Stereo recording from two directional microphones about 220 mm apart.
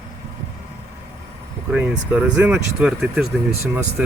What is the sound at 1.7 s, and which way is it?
Speech, 5° right (ahead or behind).